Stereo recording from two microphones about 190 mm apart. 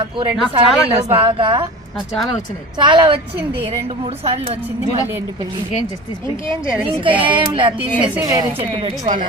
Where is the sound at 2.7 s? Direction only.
25° right (ahead or behind).